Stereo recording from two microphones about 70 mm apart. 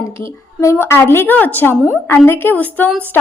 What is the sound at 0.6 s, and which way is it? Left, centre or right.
A woman's voice, left.